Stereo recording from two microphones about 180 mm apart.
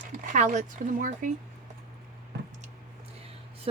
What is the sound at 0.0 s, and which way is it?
Speech, 45° right (ahead or behind).